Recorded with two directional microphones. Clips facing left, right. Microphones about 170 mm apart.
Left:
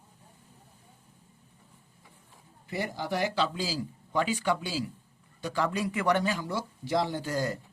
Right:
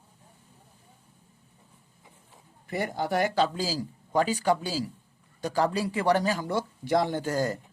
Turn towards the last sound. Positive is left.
turn(degrees=-45)  # may be behind; listen again after turning